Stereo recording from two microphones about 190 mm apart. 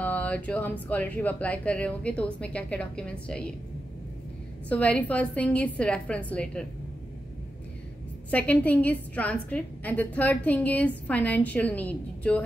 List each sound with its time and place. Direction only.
0.0 s a woman's voice: 5° left (ahead or behind)
4.6 s a woman's voice: 5° left (ahead or behind)
8.3 s a woman's voice: 10° left (ahead or behind)